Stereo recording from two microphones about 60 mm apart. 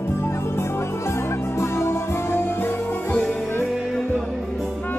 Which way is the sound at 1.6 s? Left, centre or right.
Left.